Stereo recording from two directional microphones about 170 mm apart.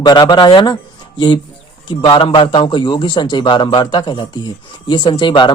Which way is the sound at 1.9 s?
30° left (ahead or behind).